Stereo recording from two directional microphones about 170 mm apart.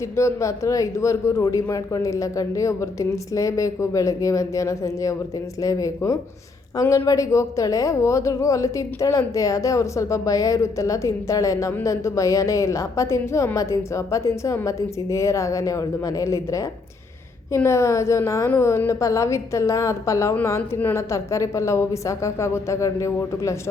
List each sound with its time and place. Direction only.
0.2 s a woman's voice: 15° left (ahead or behind)